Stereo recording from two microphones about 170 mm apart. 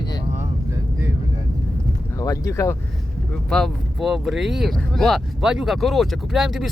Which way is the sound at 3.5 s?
Centre (ahead or behind).